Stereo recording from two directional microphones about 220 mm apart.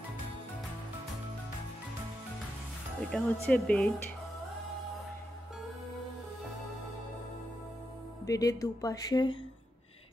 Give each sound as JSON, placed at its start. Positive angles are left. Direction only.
{"t": 3.1, "sound": "speech", "side_deg": 5}
{"t": 8.3, "sound": "speech", "side_deg": 15}